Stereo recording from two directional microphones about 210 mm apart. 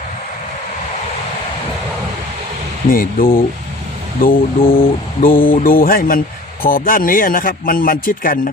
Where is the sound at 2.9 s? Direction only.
45° left (ahead or behind).